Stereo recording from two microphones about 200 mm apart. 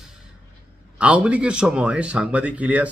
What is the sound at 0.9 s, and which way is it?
A man's voice, 5° right (ahead or behind).